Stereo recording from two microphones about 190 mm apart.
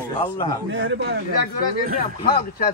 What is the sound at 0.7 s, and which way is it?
Speech, 65° right (ahead or behind).